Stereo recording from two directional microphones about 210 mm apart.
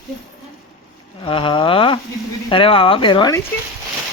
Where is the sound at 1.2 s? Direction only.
25° left (ahead or behind).